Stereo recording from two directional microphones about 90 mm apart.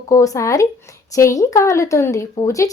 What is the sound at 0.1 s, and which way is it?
A woman's voice, 35° left (ahead or behind).